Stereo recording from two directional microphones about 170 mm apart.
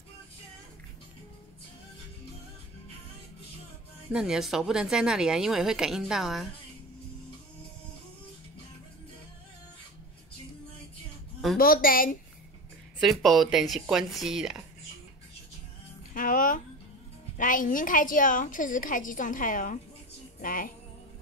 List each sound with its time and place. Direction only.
4.1 s a woman's voice: 5° right (ahead or behind)
11.5 s a woman's voice: 55° left (ahead or behind)
13.0 s a woman's voice: centre (ahead or behind)
16.1 s a woman's voice: 50° left (ahead or behind)
20.3 s music: 55° left (ahead or behind)